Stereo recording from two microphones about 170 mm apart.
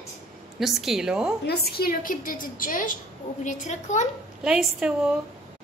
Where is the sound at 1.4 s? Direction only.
70° left (ahead or behind); by 4.1 s 45° left (ahead or behind).